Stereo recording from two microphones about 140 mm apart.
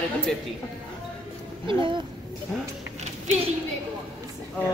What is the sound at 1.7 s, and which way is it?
Speech, 35° right (ahead or behind).